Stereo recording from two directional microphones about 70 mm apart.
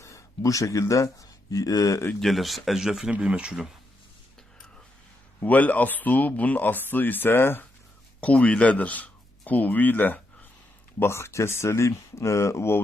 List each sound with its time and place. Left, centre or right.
0.0 s speech: left
2.2 s speech: centre
5.4 s speech: left
8.2 s speech: centre
11.0 s speech: left